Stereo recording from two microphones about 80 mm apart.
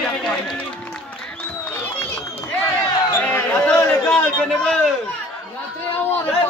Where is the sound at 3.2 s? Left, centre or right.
Left.